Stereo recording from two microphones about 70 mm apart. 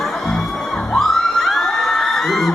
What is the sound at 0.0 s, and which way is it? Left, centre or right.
Music, centre.